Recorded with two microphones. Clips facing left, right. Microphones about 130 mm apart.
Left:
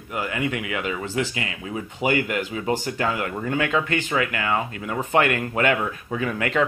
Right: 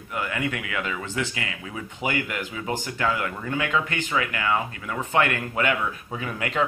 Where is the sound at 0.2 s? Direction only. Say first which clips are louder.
Left 2 dB; 30° left (ahead or behind).